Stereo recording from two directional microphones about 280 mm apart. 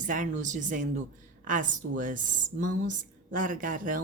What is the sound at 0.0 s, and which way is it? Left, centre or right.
A woman's voice, right.